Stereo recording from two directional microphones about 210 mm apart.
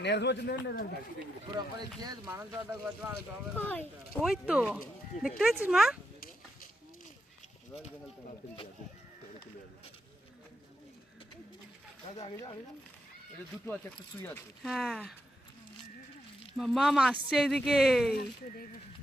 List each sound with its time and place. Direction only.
0.0 s speech: 55° left (ahead or behind)
2.0 s speech: 20° right (ahead or behind)
3.5 s speech: 10° left (ahead or behind)
4.2 s speech: 5° right (ahead or behind)
13.9 s speech: 15° left (ahead or behind)
16.6 s speech: centre (ahead or behind)